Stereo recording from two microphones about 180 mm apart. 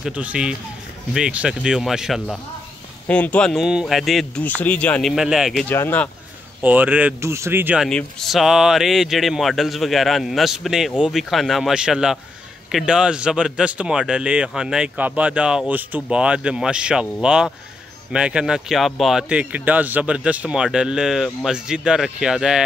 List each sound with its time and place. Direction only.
0.0 s speech: 5° right (ahead or behind)
5.7 s speech: 10° left (ahead or behind)
6.6 s speech: 10° right (ahead or behind)